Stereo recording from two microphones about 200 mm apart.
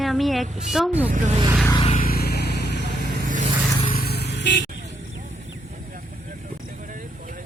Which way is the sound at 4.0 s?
55° left (ahead or behind).